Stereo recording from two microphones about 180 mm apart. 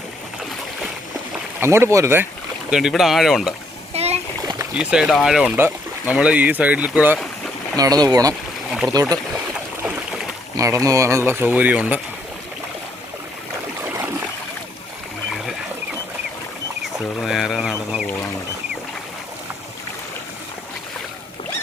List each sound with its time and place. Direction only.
1.6 s speech: 15° right (ahead or behind)
2.6 s speech: 5° right (ahead or behind)
3.9 s splash: 35° right (ahead or behind)
4.7 s speech: 5° right (ahead or behind)
7.8 s speech: 20° right (ahead or behind)
9.8 s a sound: 5° right (ahead or behind)
10.6 s speech: 20° right (ahead or behind)
13.8 s a sound: 15° right (ahead or behind)
17.2 s a sound: centre (ahead or behind)